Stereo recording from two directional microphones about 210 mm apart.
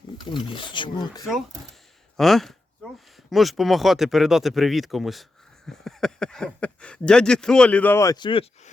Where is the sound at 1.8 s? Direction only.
Centre (ahead or behind).